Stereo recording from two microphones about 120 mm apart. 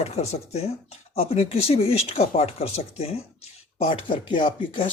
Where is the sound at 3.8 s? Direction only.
45° left (ahead or behind).